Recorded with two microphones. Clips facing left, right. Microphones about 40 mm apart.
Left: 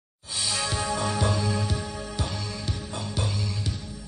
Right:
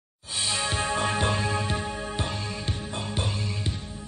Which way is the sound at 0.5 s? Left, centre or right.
Right.